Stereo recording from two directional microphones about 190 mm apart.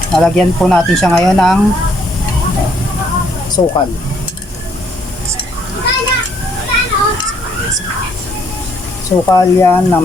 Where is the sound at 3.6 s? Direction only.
25° left (ahead or behind).